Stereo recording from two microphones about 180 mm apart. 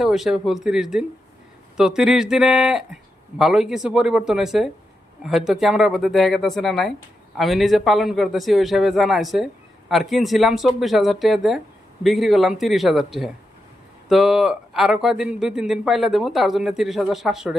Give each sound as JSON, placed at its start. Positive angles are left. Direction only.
{"t": 0.0, "sound": "speech", "side_deg": 0}